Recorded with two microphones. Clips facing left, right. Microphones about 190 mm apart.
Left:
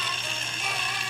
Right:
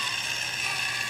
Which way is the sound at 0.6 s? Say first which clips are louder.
Left 7 dB; 75° left (ahead or behind).